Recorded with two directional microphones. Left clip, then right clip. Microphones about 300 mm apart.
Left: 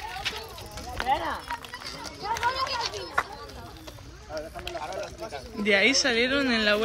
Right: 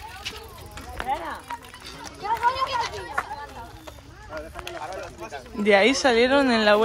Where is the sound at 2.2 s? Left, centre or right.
Right.